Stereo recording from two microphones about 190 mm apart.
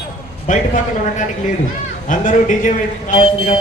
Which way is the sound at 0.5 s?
45° left (ahead or behind).